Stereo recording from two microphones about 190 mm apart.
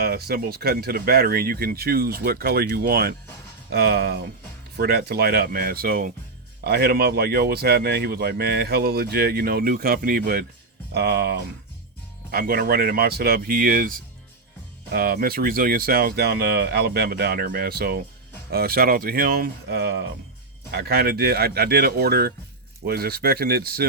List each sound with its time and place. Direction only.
0.0 s speech: 55° right (ahead or behind)